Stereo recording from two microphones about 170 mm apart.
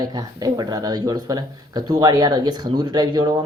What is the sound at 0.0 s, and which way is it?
Speech, 25° right (ahead or behind).